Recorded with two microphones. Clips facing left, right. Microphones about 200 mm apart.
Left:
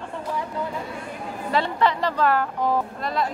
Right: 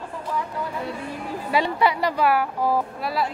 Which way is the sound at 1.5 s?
10° right (ahead or behind).